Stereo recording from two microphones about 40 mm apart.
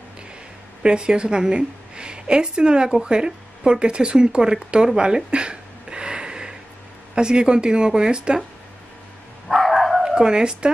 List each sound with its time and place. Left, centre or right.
0.8 s a woman's voice: right
9.5 s dog: centre
10.1 s speech: right